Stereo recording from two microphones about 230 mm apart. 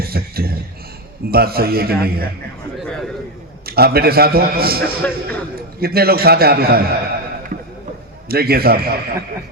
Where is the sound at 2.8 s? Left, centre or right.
Centre.